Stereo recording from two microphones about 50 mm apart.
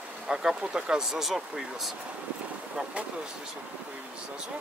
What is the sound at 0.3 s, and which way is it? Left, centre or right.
Speech, centre.